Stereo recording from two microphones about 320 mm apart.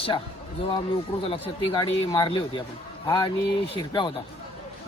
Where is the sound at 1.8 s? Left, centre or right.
Centre.